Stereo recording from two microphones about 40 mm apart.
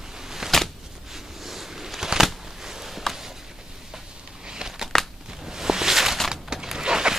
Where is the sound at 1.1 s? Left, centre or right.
Centre.